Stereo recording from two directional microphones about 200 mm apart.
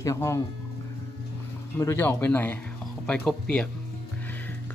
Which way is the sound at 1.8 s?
10° left (ahead or behind).